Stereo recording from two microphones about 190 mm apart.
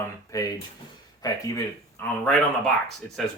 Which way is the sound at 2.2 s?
5° left (ahead or behind).